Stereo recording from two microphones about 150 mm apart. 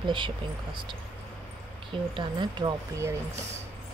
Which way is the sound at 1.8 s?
35° right (ahead or behind).